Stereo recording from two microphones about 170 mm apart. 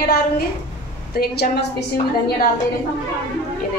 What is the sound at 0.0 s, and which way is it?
A woman's voice, 65° left (ahead or behind).